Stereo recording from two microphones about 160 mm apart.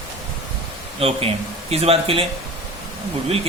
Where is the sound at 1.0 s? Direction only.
35° right (ahead or behind).